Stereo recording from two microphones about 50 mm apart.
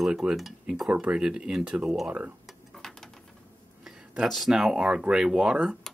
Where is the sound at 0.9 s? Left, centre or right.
Right.